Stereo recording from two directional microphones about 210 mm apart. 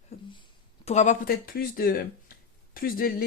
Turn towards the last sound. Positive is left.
turn(degrees=45)  # may be behind; listen again after turning